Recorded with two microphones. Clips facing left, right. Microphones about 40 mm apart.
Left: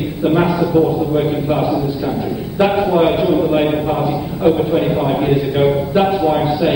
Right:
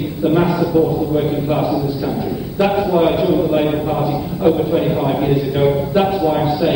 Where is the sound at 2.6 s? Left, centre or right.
Centre.